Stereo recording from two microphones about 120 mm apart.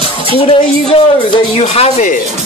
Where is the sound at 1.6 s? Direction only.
70° left (ahead or behind).